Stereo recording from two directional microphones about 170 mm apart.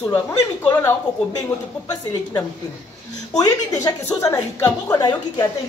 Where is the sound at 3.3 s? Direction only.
20° left (ahead or behind).